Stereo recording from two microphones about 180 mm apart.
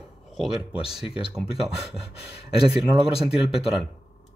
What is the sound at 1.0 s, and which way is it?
Speech, 30° left (ahead or behind).